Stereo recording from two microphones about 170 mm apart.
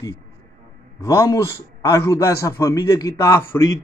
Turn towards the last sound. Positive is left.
turn(degrees=20)  # may be behind; listen again after turning